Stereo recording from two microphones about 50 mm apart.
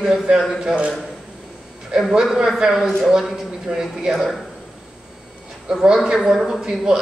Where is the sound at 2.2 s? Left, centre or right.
Centre.